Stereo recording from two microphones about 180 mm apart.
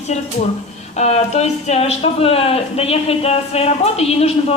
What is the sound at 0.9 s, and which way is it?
Speech, 40° left (ahead or behind).